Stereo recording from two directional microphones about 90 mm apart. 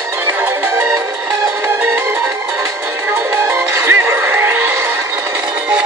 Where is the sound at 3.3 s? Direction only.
25° right (ahead or behind).